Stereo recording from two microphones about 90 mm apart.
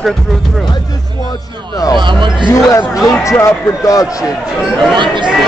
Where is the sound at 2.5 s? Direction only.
35° left (ahead or behind).